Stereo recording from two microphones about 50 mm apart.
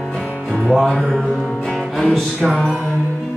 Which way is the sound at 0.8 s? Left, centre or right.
Centre.